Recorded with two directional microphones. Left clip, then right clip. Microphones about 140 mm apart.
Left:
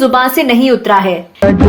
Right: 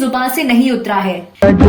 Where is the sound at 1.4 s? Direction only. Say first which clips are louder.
Even; centre (ahead or behind).